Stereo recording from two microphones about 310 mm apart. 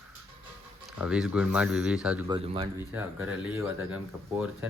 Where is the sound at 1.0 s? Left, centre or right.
Centre.